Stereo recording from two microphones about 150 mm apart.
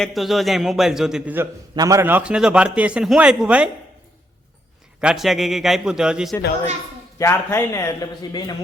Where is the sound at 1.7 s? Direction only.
25° right (ahead or behind); by 3.7 s 5° right (ahead or behind).